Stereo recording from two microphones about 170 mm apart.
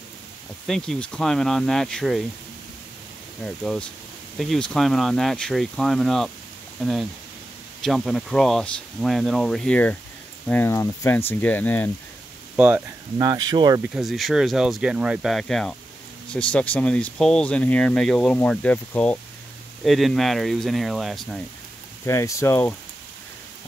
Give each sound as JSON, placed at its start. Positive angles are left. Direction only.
{"t": 0.7, "sound": "speech", "side_deg": 5}
{"t": 3.4, "sound": "speech", "side_deg": 5}
{"t": 12.5, "sound": "speech", "side_deg": -10}
{"t": 13.2, "sound": "speech", "side_deg": -20}
{"t": 13.9, "sound": "speech", "side_deg": 0}
{"t": 22.0, "sound": "speech", "side_deg": 15}